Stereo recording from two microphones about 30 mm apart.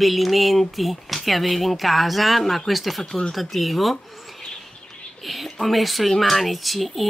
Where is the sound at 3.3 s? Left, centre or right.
Centre.